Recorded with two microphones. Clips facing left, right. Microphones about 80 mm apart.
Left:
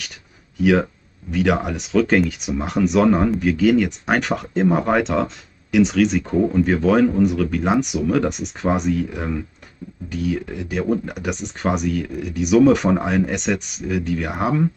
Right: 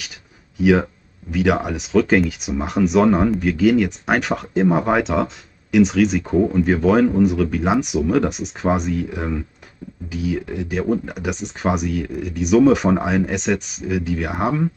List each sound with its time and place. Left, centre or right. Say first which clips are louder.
0.6 s speech: right 1 dB; centre